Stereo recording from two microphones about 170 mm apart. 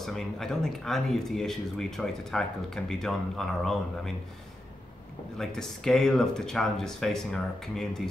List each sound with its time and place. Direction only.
0.0 s speech: centre (ahead or behind)
5.4 s speech: centre (ahead or behind)